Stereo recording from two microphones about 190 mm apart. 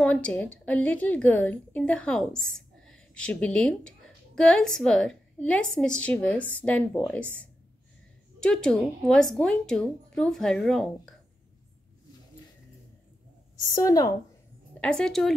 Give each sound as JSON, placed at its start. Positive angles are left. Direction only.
{"t": 0.0, "sound": "a woman's voice", "side_deg": 5}
{"t": 8.4, "sound": "a woman's voice", "side_deg": 5}
{"t": 13.7, "sound": "speech", "side_deg": 20}
{"t": 14.8, "sound": "a woman's voice", "side_deg": 5}